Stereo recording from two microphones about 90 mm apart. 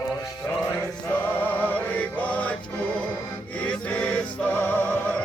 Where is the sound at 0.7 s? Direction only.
20° left (ahead or behind).